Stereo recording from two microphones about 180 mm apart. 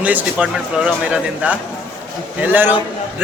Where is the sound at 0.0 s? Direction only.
10° right (ahead or behind).